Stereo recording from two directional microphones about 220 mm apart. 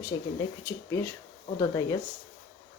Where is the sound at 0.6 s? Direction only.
10° left (ahead or behind).